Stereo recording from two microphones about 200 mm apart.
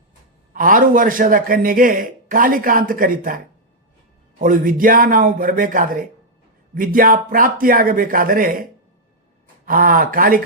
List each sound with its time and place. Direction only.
0.5 s a man's voice: 45° right (ahead or behind)
9.6 s a man's voice: 45° right (ahead or behind)